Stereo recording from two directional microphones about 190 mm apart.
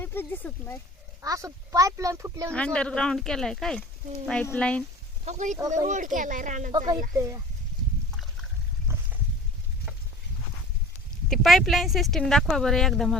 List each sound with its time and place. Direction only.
0.0 s speech: 10° left (ahead or behind)
1.2 s speech: 20° right (ahead or behind)
2.5 s speech: 5° left (ahead or behind)
5.2 s speech: 40° right (ahead or behind)
6.7 s speech: 20° right (ahead or behind)
8.9 s boat: 15° right (ahead or behind)
11.3 s speech: centre (ahead or behind)